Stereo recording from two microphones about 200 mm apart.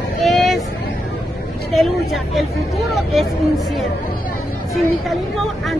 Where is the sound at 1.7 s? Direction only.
Centre (ahead or behind).